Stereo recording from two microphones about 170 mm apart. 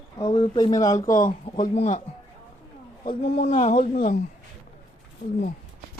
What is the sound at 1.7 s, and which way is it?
Speech, 45° left (ahead or behind).